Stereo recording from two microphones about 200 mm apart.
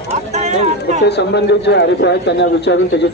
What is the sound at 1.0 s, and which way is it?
A man's voice, 60° left (ahead or behind).